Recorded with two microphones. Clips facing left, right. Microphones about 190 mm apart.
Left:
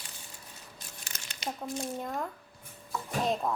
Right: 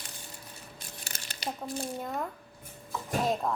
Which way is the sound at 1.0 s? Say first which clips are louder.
Right 2 dB; 35° right (ahead or behind).